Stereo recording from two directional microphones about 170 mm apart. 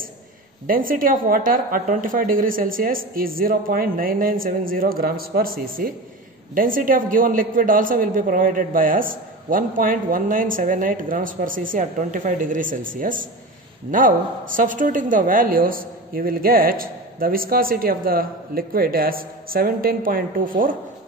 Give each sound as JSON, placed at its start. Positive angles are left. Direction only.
{"t": 0.7, "sound": "a woman's voice", "side_deg": -55}